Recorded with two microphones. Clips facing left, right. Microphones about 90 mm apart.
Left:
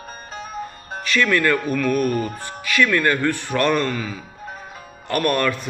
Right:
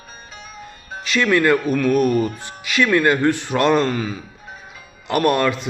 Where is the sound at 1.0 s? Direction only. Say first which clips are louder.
Right 2 dB; 20° right (ahead or behind).